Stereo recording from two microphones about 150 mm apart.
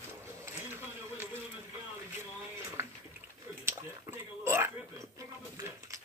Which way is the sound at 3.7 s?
15° right (ahead or behind).